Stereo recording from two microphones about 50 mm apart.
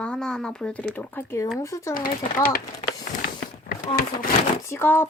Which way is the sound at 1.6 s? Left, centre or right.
Left.